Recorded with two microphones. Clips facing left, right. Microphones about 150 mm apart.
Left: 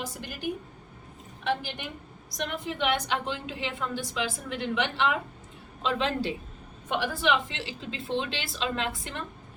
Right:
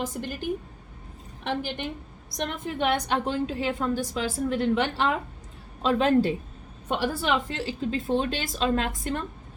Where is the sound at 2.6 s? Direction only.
45° right (ahead or behind).